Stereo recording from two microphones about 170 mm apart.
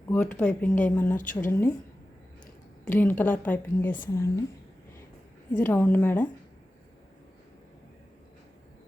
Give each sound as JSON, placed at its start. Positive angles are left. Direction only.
{"t": 0.3, "sound": "speech", "side_deg": 5}
{"t": 1.1, "sound": "a woman's voice", "side_deg": 50}
{"t": 1.4, "sound": "speech", "side_deg": 15}
{"t": 2.8, "sound": "speech", "side_deg": 10}
{"t": 5.6, "sound": "speech", "side_deg": 10}